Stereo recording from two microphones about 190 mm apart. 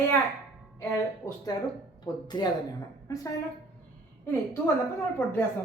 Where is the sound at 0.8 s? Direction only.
15° left (ahead or behind).